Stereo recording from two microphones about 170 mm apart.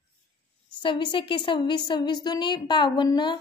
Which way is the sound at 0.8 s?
30° left (ahead or behind).